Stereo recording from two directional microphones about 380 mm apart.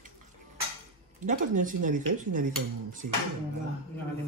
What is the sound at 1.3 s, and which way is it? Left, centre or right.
Speech, centre.